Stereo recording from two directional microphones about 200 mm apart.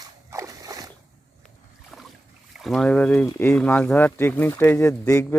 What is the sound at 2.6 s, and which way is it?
Speech, centre (ahead or behind).